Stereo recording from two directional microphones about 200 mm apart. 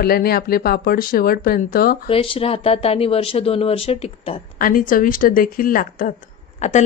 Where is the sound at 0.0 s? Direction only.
50° left (ahead or behind).